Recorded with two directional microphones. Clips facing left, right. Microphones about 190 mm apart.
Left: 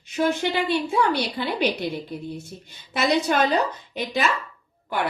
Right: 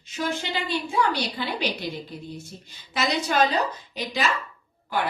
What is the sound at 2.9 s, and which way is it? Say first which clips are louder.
Speech: left 2 dB; 55° left (ahead or behind).